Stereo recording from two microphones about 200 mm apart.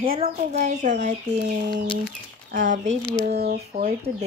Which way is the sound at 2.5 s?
40° right (ahead or behind).